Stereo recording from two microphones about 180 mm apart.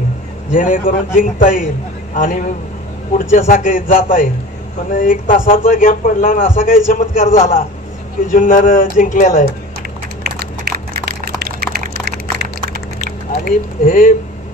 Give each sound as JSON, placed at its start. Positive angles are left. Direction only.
{"t": 0.5, "sound": "a man's voice", "side_deg": 45}
{"t": 10.2, "sound": "a sound", "side_deg": -60}
{"t": 13.5, "sound": "a man's voice", "side_deg": 50}